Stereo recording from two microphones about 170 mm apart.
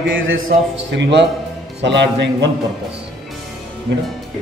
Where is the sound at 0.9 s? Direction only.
90° right.